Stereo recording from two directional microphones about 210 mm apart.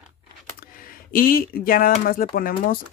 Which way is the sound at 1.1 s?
45° left (ahead or behind).